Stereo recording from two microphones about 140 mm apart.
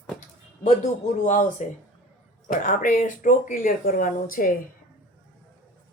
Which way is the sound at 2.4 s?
80° left.